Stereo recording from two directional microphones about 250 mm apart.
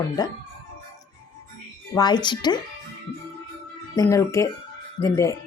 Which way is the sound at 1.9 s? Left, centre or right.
Centre.